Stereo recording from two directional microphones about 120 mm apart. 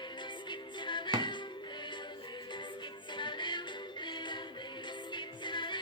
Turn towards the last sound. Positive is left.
turn(degrees=40)  # may be behind; listen again after turning